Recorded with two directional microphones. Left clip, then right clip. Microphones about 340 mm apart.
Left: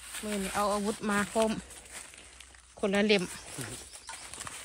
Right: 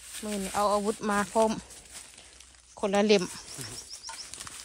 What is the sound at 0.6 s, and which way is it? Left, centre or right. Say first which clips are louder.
Speech: right 5 dB; centre.